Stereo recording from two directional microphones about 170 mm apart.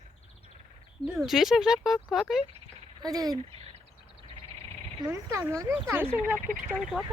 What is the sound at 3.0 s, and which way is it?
Speech, 20° right (ahead or behind).